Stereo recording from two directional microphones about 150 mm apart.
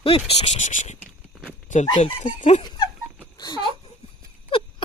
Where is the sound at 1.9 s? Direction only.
30° left (ahead or behind).